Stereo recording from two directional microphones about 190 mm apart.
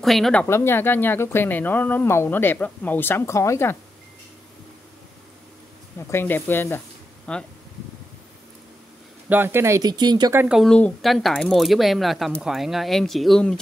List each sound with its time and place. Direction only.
0.0 s speech: centre (ahead or behind)
5.9 s speech: 15° left (ahead or behind)
9.3 s speech: 10° right (ahead or behind)
10.4 s speech: centre (ahead or behind)